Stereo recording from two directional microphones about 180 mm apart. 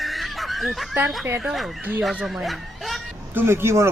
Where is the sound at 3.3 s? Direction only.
15° right (ahead or behind).